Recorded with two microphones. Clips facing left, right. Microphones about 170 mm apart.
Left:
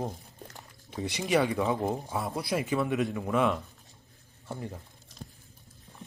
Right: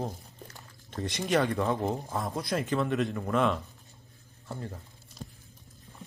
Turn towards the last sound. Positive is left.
turn(degrees=15)  # may be behind; listen again after turning